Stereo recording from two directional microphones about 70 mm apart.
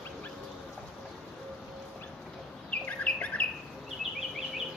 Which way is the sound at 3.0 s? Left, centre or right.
Left.